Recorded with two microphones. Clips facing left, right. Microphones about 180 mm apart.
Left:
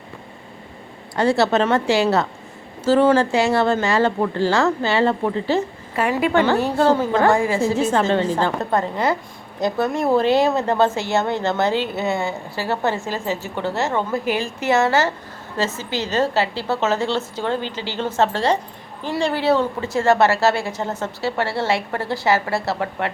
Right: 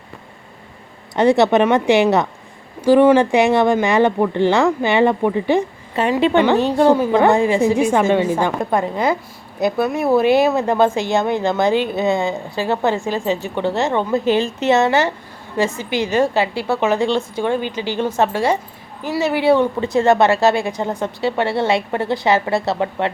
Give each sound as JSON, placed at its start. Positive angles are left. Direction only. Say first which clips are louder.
{"t": 1.1, "sound": "a woman's voice", "louder": "right 4 dB", "side_deg": -20}